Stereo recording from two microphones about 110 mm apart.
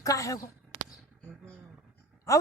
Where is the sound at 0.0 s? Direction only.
30° left (ahead or behind).